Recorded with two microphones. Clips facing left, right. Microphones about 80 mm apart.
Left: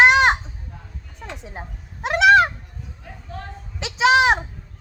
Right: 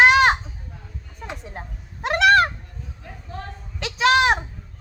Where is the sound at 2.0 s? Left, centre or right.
Centre.